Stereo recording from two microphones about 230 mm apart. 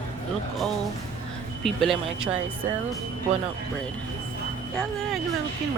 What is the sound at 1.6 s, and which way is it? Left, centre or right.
Speech, centre.